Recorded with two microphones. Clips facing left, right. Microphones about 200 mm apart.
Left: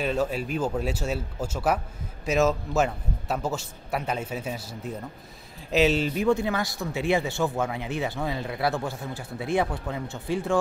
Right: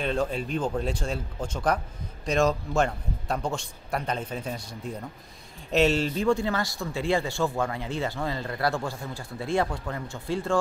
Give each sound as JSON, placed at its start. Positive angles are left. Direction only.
{"t": 0.0, "sound": "a man's voice", "side_deg": 5}
{"t": 6.1, "sound": "speech", "side_deg": 15}
{"t": 7.4, "sound": "a man's voice", "side_deg": 5}
{"t": 7.7, "sound": "a man's voice", "side_deg": 15}